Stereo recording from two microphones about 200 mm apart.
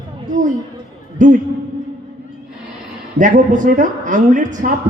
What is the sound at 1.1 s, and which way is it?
Speech, 40° right (ahead or behind).